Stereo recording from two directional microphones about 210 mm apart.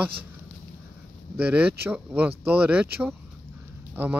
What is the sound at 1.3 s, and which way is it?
Speech, 5° right (ahead or behind).